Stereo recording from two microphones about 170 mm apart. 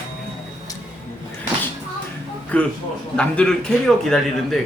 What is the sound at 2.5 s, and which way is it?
A man's voice, 10° left (ahead or behind).